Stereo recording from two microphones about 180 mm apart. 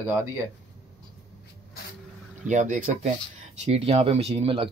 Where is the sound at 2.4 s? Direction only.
45° right (ahead or behind).